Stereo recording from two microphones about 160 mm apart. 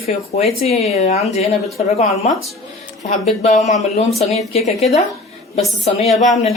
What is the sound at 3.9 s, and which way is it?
Speech, 40° left (ahead or behind).